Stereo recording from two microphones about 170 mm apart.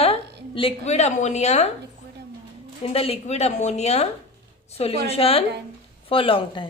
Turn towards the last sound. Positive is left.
turn(degrees=30)  # may be behind; listen again after turning